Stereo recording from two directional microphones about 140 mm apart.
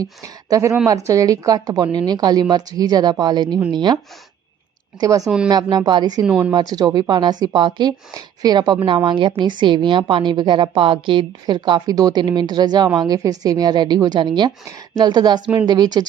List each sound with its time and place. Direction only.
0.0 s a woman's voice: 25° right (ahead or behind)
4.9 s a woman's voice: 25° right (ahead or behind)
6.2 s speech: 10° right (ahead or behind)
6.5 s a woman's voice: 30° right (ahead or behind)